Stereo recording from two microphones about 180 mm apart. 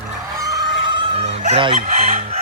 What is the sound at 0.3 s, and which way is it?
Chicken, 20° right (ahead or behind).